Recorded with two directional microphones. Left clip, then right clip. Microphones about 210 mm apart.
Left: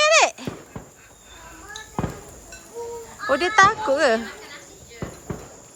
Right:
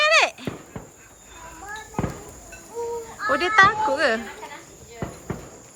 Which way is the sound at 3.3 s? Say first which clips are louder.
Even; 5° left (ahead or behind).